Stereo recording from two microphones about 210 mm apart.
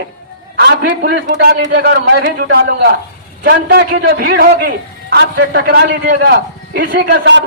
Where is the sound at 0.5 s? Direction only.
50° right (ahead or behind).